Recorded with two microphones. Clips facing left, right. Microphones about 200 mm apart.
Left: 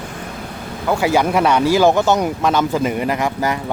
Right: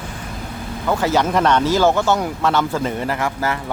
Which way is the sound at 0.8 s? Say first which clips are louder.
Left 2 dB; 10° left (ahead or behind).